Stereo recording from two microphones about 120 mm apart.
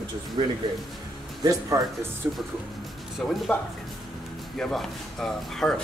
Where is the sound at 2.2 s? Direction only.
20° right (ahead or behind).